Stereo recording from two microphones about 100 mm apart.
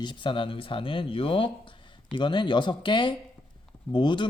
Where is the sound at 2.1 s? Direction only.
55° left (ahead or behind).